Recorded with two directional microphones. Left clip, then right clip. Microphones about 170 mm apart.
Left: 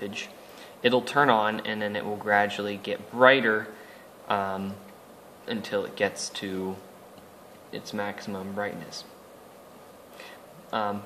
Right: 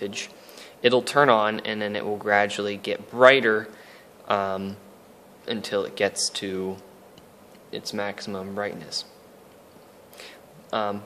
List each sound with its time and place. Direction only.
0.0 s speech: 60° right (ahead or behind)
7.7 s speech: 60° right (ahead or behind)
10.1 s a sound: 60° right (ahead or behind)